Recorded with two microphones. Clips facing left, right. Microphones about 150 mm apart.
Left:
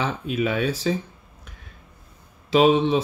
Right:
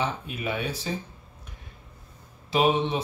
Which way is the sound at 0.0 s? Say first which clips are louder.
Left 5 dB; 90° left.